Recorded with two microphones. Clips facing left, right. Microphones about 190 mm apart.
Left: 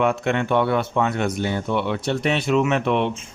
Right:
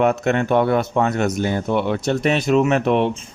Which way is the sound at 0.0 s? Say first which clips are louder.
Right 3 dB; 40° right (ahead or behind).